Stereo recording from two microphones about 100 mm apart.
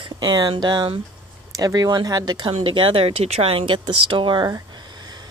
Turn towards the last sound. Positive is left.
turn(degrees=-45)  # may be behind; listen again after turning